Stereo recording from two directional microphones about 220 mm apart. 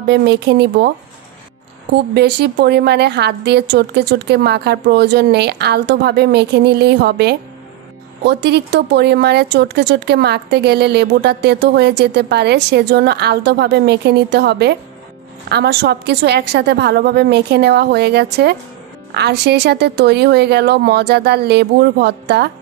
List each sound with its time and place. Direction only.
0.0 s speech: 50° right (ahead or behind)
2.1 s speech: 50° right (ahead or behind)